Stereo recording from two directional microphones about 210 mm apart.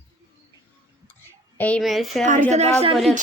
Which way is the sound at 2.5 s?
30° right (ahead or behind).